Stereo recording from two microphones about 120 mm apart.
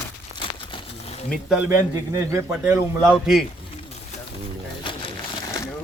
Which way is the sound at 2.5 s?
10° right (ahead or behind).